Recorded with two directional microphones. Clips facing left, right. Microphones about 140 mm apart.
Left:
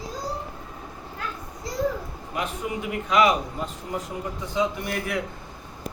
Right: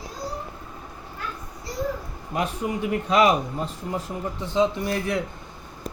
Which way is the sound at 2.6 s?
35° right (ahead or behind).